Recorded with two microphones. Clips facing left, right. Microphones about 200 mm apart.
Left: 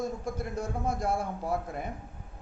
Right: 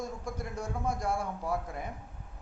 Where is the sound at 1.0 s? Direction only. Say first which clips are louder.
Left 2 dB; 25° left (ahead or behind).